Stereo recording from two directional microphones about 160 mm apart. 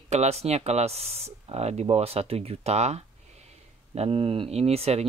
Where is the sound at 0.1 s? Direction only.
45° right (ahead or behind).